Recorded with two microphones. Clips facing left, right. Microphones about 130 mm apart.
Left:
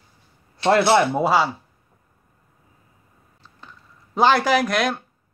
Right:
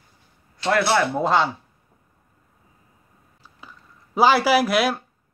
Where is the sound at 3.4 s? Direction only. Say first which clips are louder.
Even; 5° right (ahead or behind).